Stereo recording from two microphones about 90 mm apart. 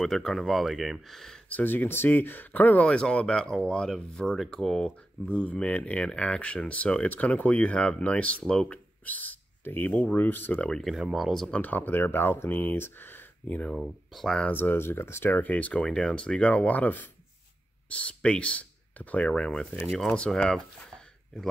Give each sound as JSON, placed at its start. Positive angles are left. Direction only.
{"t": 0.0, "sound": "speech", "side_deg": 5}
{"t": 1.5, "sound": "speech", "side_deg": 20}
{"t": 11.5, "sound": "speech", "side_deg": 20}
{"t": 13.7, "sound": "speech", "side_deg": 0}
{"t": 14.5, "sound": "speech", "side_deg": 20}